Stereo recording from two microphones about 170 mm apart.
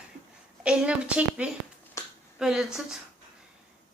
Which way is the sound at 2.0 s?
15° left (ahead or behind).